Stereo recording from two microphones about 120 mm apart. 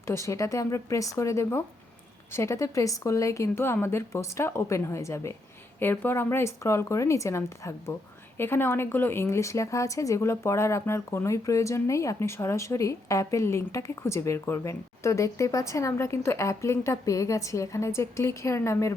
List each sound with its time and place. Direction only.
0.1 s a woman's voice: 25° left (ahead or behind)